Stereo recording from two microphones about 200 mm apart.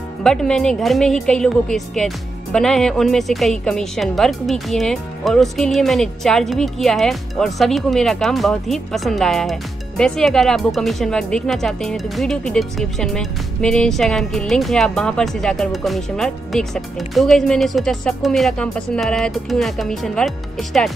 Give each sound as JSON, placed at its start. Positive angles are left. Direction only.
{"t": 0.2, "sound": "speech", "side_deg": 5}